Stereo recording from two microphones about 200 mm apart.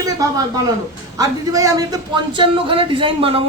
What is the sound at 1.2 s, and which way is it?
A man's voice, 15° right (ahead or behind).